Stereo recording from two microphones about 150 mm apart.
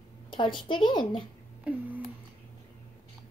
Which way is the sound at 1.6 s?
10° right (ahead or behind).